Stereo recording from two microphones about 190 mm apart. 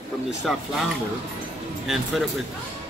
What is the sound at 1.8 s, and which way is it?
Speech, centre (ahead or behind).